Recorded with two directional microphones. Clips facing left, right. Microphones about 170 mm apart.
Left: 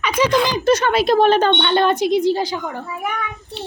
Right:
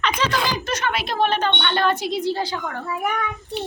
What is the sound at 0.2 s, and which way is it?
Speech, 10° left (ahead or behind).